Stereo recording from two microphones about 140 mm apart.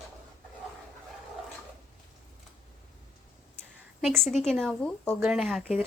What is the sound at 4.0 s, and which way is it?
A woman's voice, centre (ahead or behind).